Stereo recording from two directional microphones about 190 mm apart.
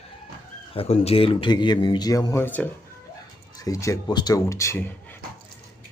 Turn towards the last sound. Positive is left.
turn(degrees=10)  # may be behind; listen again after turning